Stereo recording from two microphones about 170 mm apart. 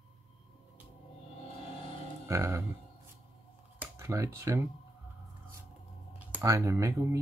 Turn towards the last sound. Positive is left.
turn(degrees=-20)  # may be behind; listen again after turning